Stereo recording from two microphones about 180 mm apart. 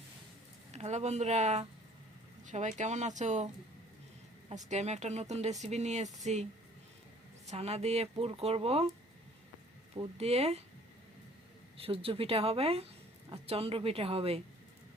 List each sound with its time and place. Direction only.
0.7 s speech: 40° right (ahead or behind)
7.5 s speech: 35° right (ahead or behind)
10.2 s speech: 35° right (ahead or behind)
11.8 s speech: 30° right (ahead or behind)